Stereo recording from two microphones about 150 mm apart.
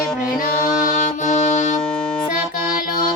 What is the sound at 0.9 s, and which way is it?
Music, 55° left (ahead or behind).